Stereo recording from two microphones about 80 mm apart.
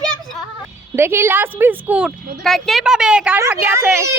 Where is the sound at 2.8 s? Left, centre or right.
Centre.